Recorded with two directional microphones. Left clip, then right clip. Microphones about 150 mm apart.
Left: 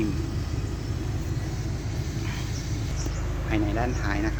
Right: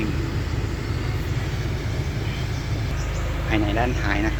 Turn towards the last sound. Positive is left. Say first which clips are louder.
# right 5 dB
turn(degrees=0)  # may be behind; listen again after turning